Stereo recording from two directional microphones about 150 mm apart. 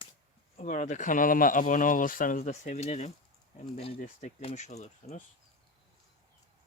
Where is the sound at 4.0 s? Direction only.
50° left (ahead or behind).